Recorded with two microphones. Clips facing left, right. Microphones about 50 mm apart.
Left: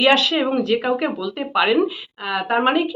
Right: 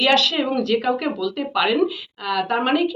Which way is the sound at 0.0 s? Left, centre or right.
Centre.